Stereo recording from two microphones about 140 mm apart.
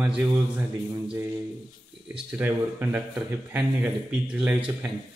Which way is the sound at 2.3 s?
15° right (ahead or behind).